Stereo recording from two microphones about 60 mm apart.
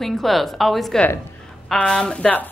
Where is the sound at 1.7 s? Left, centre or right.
Centre.